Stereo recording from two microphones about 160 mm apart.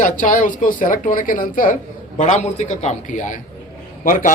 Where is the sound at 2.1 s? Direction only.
45° left (ahead or behind).